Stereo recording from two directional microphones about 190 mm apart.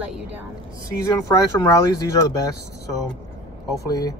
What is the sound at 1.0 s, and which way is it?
Speech, 20° left (ahead or behind).